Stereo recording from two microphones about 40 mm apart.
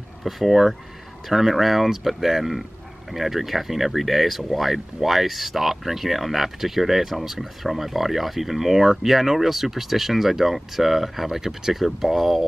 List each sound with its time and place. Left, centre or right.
0.2 s speech: centre